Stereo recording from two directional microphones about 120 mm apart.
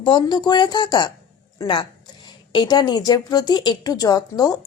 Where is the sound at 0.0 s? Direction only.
40° left (ahead or behind).